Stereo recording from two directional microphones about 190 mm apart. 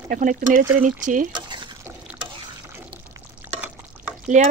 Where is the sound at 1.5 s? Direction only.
25° right (ahead or behind).